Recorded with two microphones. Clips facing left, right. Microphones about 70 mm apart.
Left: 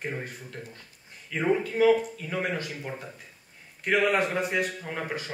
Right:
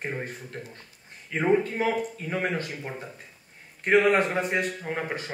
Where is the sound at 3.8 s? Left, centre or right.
Right.